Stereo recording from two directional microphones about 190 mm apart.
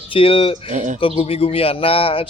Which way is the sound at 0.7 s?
40° right (ahead or behind).